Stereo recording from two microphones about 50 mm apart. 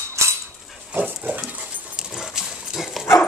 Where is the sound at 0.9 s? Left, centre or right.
Right.